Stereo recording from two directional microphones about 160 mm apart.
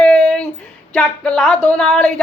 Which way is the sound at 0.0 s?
5° left (ahead or behind).